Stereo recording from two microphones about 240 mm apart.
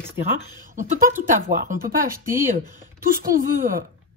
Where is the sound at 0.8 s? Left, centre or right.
Right.